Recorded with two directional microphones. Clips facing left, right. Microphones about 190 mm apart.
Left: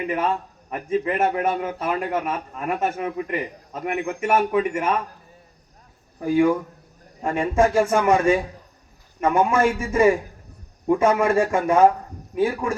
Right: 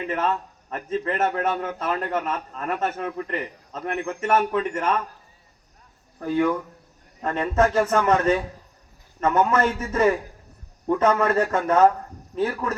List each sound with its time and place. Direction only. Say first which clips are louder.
0.1 s a man's voice: right 1 dB; 10° left (ahead or behind)
6.1 s a man's voice: left 4 dB; 10° left (ahead or behind)